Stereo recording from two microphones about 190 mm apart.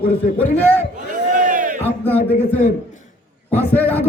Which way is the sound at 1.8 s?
10° left (ahead or behind).